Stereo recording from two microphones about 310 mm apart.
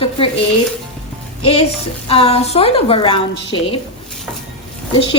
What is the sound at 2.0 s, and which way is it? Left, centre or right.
A woman's voice, centre.